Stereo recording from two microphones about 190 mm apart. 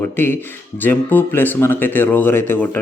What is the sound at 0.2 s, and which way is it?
Speech, 10° left (ahead or behind).